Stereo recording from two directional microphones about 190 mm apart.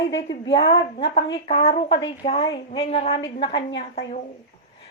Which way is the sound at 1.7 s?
65° left (ahead or behind).